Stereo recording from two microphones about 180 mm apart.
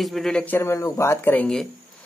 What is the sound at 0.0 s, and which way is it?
Speech, centre (ahead or behind).